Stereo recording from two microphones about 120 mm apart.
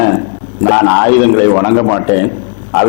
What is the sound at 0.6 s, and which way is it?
A man's voice, 15° left (ahead or behind).